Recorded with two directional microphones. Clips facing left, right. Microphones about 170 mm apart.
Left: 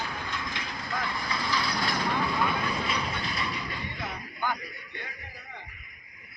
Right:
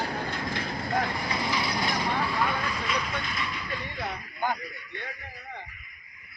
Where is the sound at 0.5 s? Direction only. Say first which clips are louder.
Right 9 dB; 50° right (ahead or behind).